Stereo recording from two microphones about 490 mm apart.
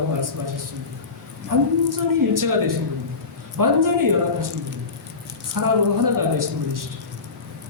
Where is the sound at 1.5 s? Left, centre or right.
Right.